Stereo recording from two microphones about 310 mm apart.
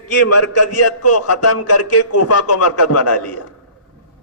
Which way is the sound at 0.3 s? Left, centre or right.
Left.